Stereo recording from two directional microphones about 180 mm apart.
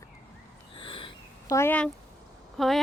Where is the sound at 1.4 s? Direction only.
15° left (ahead or behind).